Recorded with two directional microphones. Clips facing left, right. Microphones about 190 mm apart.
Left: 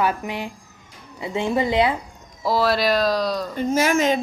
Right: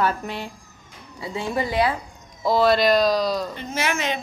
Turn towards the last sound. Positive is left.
turn(degrees=40)  # may be behind; listen again after turning